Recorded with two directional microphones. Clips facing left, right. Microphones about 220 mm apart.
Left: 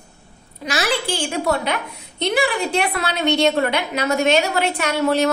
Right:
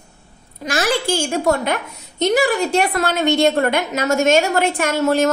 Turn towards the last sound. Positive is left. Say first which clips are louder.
# right 2 dB
turn(degrees=-50)  # may be behind; listen again after turning